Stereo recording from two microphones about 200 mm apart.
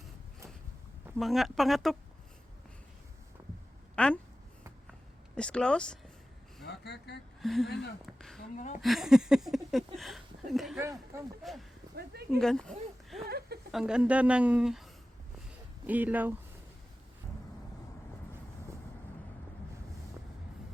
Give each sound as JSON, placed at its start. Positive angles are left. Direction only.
{"t": 1.2, "sound": "speech", "side_deg": 0}
{"t": 3.9, "sound": "a woman's voice", "side_deg": 5}
{"t": 5.3, "sound": "speech", "side_deg": 5}
{"t": 6.7, "sound": "speech", "side_deg": 55}
{"t": 7.4, "sound": "speech", "side_deg": 0}
{"t": 8.4, "sound": "a woman's voice", "side_deg": 40}
{"t": 8.8, "sound": "speech", "side_deg": 0}
{"t": 11.9, "sound": "a sound", "side_deg": -50}
{"t": 12.4, "sound": "speech", "side_deg": 5}
{"t": 13.2, "sound": "a sound", "side_deg": -50}
{"t": 13.7, "sound": "speech", "side_deg": -5}
{"t": 15.9, "sound": "speech", "side_deg": -10}